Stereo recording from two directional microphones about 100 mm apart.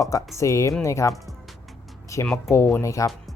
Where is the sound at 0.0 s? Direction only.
35° left (ahead or behind).